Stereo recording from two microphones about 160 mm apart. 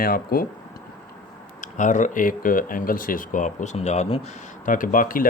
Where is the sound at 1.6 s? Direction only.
50° left (ahead or behind).